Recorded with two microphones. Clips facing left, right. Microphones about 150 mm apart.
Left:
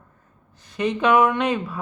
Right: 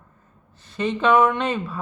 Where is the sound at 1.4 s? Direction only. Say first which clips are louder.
Left 2 dB; centre (ahead or behind).